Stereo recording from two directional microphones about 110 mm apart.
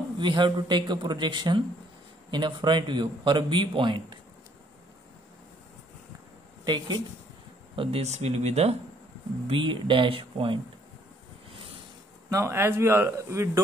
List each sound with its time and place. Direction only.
0.2 s speech: 45° right (ahead or behind)
6.6 s speech: 40° right (ahead or behind)
7.7 s speech: 55° right (ahead or behind)
8.0 s speech: 85° right
9.5 s speech: 50° right (ahead or behind)
12.3 s speech: 25° right (ahead or behind)